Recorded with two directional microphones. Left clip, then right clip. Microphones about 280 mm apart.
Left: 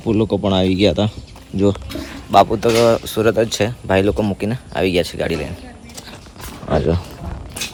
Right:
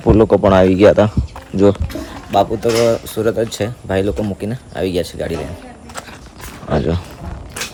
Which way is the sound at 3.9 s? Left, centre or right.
Left.